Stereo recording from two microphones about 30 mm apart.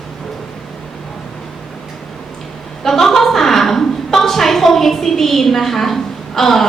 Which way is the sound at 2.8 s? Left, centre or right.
Centre.